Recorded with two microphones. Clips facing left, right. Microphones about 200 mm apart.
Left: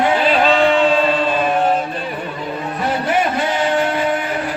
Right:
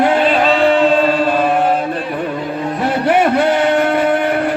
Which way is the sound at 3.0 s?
60° right (ahead or behind).